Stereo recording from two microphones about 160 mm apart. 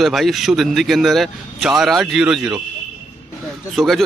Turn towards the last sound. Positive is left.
turn(degrees=0)  # may be behind; listen again after turning